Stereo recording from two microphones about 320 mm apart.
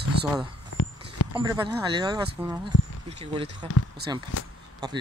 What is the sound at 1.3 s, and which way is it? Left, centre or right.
Speech, centre.